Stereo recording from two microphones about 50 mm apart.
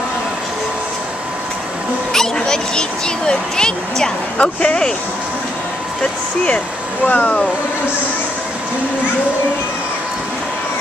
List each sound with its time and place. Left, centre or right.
2.1 s speech: centre
7.1 s speech: left